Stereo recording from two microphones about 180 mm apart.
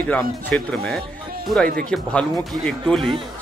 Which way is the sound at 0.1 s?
5° left (ahead or behind).